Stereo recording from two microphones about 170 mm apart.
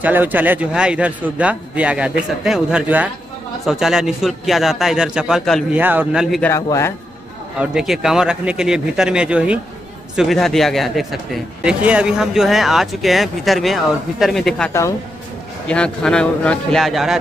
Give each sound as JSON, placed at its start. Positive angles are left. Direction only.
{"t": 0.0, "sound": "a man's voice", "side_deg": -10}
{"t": 5.8, "sound": "a man's voice", "side_deg": -10}
{"t": 6.5, "sound": "speech", "side_deg": 15}
{"t": 7.5, "sound": "speech", "side_deg": -5}
{"t": 15.7, "sound": "speech", "side_deg": 5}